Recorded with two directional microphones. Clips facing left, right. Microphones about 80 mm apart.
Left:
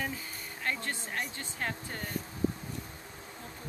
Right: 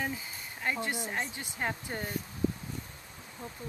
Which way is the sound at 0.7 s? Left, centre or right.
Centre.